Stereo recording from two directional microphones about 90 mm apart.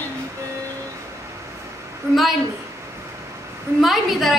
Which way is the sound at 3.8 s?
Centre (ahead or behind).